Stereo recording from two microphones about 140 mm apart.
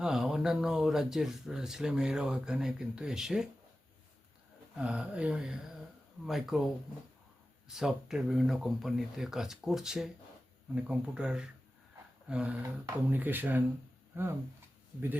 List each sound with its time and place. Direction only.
0.0 s speech: 5° right (ahead or behind)
4.8 s speech: 10° right (ahead or behind)
7.7 s speech: 5° right (ahead or behind)